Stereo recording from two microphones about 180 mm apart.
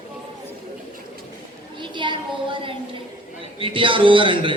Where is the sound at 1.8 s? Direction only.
25° right (ahead or behind).